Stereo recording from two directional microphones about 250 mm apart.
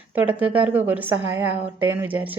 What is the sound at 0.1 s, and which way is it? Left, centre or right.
A woman's voice, centre.